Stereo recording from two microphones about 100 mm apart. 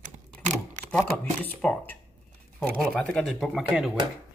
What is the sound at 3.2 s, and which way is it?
Speech, 5° left (ahead or behind).